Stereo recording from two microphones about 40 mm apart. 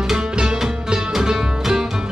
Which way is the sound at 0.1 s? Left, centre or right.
Centre.